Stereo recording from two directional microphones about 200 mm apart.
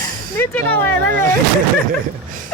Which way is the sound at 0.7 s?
55° right (ahead or behind).